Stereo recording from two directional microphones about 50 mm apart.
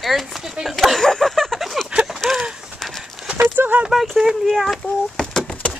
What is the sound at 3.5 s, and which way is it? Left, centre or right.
Speech, right.